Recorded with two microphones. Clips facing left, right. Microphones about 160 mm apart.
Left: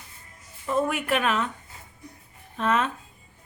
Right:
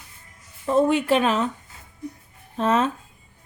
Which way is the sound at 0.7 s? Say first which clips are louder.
Right 6 dB; 30° right (ahead or behind).